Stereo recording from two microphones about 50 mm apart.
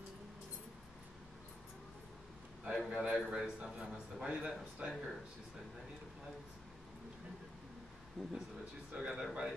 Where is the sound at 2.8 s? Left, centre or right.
Centre.